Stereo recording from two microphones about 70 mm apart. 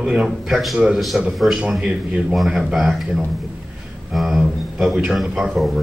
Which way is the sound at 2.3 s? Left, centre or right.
Centre.